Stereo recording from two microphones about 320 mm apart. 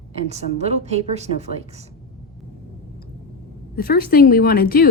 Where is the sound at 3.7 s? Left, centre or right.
Left.